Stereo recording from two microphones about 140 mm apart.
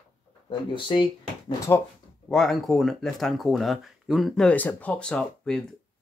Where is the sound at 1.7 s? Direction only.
25° left (ahead or behind).